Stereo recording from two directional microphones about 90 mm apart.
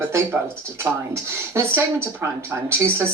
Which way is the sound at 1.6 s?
25° right (ahead or behind).